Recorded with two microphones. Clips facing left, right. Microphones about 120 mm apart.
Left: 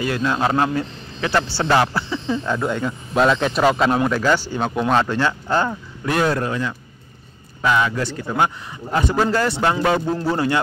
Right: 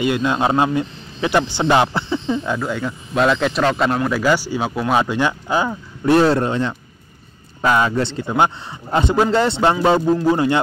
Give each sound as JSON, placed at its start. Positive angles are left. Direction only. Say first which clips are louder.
{"t": 0.0, "sound": "a man's voice", "louder": "right 2 dB", "side_deg": -20}
{"t": 2.5, "sound": "speech", "louder": "left 1 dB", "side_deg": 0}
{"t": 4.2, "sound": "speech", "louder": "right 1 dB", "side_deg": -10}
{"t": 6.0, "sound": "a man's voice", "louder": "right 6 dB", "side_deg": -30}